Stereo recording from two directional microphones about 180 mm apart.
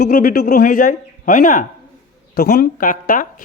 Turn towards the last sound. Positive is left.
turn(degrees=50)  # may be behind; listen again after turning